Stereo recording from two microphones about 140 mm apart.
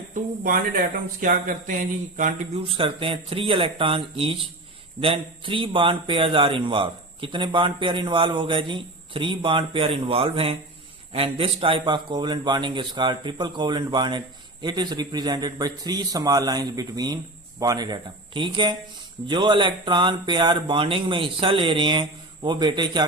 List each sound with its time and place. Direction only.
0.1 s speech: 70° right (ahead or behind)
2.6 s a man's voice: 40° right (ahead or behind)